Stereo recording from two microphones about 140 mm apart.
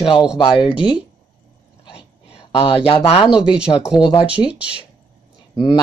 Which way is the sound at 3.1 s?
45° left (ahead or behind).